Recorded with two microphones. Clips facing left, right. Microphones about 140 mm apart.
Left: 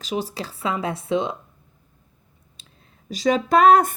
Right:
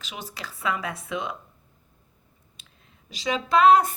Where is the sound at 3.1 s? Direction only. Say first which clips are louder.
Left 6 dB; 45° left (ahead or behind).